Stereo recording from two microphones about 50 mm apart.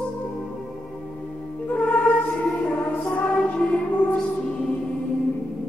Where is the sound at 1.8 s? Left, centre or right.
Left.